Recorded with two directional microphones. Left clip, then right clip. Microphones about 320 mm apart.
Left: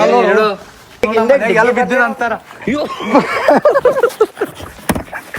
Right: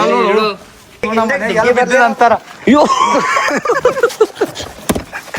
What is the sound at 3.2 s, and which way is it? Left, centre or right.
Speech, centre.